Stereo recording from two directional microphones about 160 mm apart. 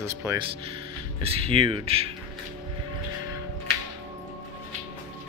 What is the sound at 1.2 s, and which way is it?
Speech, 35° right (ahead or behind).